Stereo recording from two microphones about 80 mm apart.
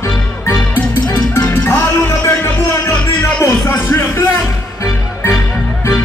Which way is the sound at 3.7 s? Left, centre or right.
Left.